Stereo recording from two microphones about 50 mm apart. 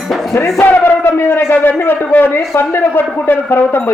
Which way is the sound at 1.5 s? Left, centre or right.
Left.